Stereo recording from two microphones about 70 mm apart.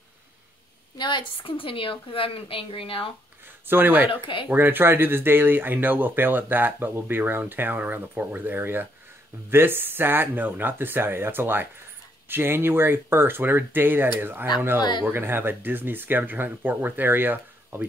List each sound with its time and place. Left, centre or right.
0.9 s speech: left
3.6 s speech: right
14.8 s speech: left
15.0 s speech: right